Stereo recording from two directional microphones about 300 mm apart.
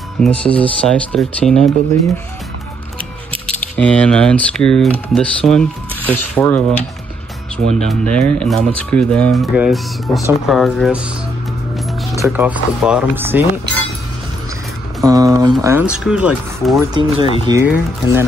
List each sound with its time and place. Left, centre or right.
0.2 s speech: centre
3.4 s speech: centre
12.2 s speech: centre
15.0 s speech: centre